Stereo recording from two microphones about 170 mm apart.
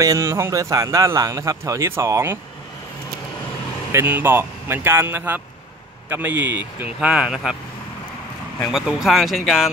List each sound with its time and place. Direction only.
0.0 s a man's voice: 20° right (ahead or behind)
3.9 s speech: 10° right (ahead or behind)
8.5 s speech: centre (ahead or behind)